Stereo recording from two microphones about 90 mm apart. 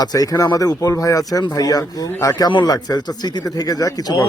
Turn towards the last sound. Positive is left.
turn(degrees=45)  # may be behind; listen again after turning